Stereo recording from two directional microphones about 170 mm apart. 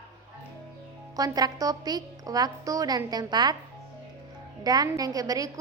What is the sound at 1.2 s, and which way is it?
A woman's voice, 20° right (ahead or behind).